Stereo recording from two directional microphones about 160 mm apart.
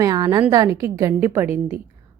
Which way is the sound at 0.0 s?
25° right (ahead or behind).